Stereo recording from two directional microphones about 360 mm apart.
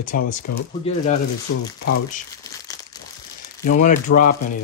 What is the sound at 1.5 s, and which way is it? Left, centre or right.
Speech, left.